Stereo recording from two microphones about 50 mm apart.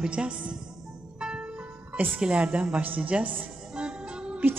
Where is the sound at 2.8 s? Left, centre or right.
Right.